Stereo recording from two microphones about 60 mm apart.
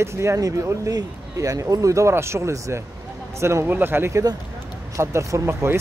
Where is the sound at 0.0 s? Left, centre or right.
Right.